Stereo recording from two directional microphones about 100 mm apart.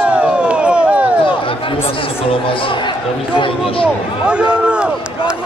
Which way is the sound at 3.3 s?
60° left (ahead or behind).